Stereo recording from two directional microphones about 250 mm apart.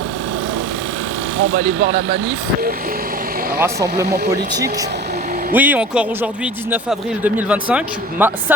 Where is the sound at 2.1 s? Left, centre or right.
Right.